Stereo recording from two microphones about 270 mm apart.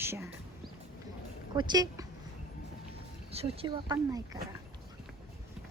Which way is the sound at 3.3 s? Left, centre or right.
Right.